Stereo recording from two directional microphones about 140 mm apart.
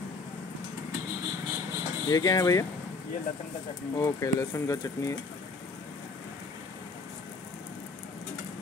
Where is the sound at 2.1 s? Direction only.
25° left (ahead or behind).